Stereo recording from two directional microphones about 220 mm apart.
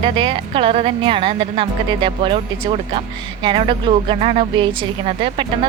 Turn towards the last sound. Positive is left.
turn(degrees=-25)  # may be behind; listen again after turning